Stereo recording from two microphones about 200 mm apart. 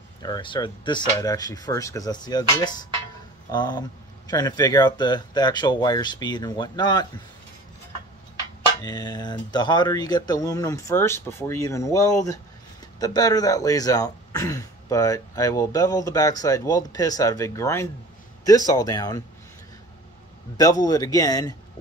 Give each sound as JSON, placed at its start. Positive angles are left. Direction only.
{"t": 0.2, "sound": "speech", "side_deg": 20}
{"t": 8.8, "sound": "speech", "side_deg": 20}
{"t": 20.5, "sound": "speech", "side_deg": 20}